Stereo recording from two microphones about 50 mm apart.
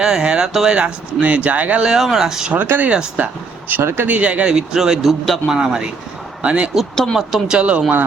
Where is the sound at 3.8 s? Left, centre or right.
Right.